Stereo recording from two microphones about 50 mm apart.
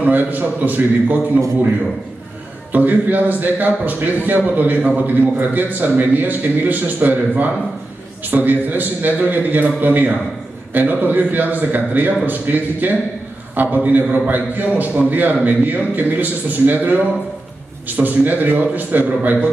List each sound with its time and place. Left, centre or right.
0.0 s speech: right
2.7 s speech: right